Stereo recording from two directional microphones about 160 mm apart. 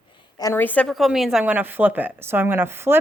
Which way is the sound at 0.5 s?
10° left (ahead or behind).